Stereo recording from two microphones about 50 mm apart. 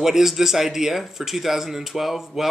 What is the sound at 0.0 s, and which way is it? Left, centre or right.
Speech, centre.